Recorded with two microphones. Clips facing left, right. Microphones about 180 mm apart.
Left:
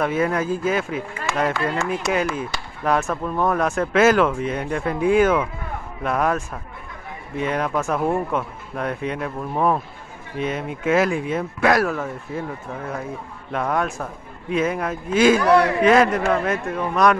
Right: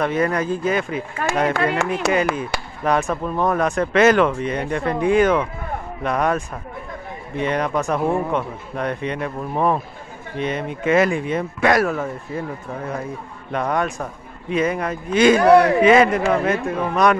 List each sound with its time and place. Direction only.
0.0 s speech: 5° left (ahead or behind)
1.5 s speech: 60° right (ahead or behind)
2.3 s speech: centre (ahead or behind)